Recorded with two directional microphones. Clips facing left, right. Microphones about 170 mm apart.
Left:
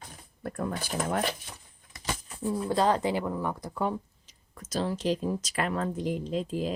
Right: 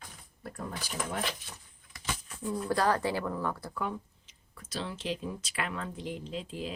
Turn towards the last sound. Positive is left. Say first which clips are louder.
# left 7 dB
turn(degrees=40)  # may be behind; listen again after turning